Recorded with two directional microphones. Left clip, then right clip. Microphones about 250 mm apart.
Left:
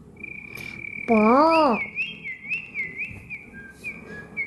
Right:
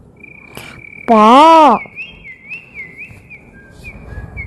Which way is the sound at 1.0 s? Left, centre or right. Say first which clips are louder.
Right 12 dB; right.